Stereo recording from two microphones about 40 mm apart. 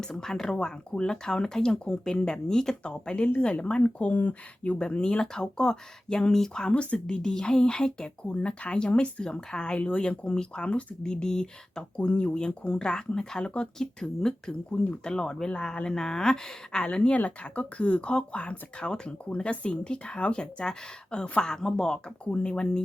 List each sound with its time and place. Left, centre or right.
0.1 s speech: centre
2.8 s speech: left
4.1 s speech: left
4.8 s speech: left
6.7 s speech: left
7.2 s speech: centre
9.2 s speech: centre
11.1 s speech: centre
13.7 s speech: centre
14.7 s speech: left
16.8 s speech: left
22.2 s speech: left